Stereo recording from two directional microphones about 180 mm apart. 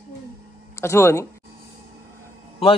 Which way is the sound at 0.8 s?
15° left (ahead or behind).